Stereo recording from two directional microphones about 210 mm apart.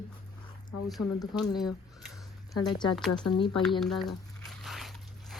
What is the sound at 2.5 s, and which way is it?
Speech, 20° left (ahead or behind).